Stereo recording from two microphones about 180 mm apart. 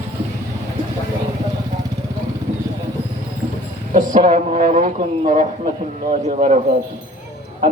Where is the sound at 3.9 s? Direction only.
45° right (ahead or behind).